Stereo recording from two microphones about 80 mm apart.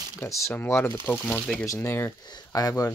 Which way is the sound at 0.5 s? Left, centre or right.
Left.